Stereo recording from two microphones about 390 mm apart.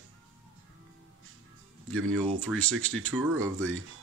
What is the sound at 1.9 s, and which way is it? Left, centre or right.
Speech, right.